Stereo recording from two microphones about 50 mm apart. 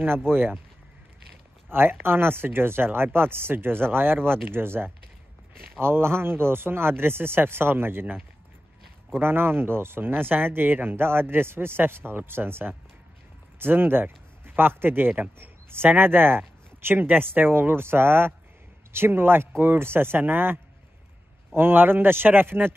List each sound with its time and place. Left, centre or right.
0.3 s speech: right
1.7 s speech: right
9.2 s speech: right
21.5 s speech: right